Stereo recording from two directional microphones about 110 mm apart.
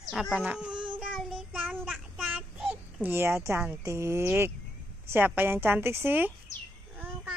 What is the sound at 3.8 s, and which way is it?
A woman's voice, 25° right (ahead or behind).